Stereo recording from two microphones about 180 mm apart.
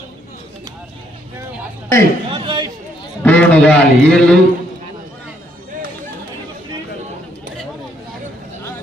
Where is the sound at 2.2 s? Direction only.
25° right (ahead or behind).